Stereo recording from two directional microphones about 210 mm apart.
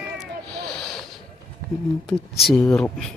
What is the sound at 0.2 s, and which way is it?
Cat, centre (ahead or behind).